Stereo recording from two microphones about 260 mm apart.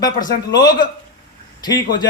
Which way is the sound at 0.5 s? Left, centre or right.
Centre.